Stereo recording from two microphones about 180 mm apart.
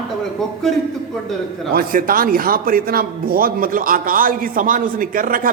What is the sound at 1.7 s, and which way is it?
A man's voice, 50° right (ahead or behind).